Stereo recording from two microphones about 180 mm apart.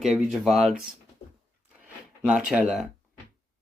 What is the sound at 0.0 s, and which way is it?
Speech, centre (ahead or behind).